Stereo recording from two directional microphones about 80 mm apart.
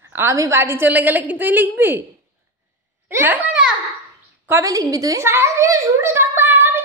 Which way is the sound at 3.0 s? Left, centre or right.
Right.